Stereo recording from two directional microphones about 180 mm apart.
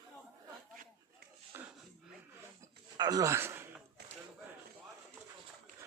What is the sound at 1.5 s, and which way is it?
Wheeze, 10° right (ahead or behind).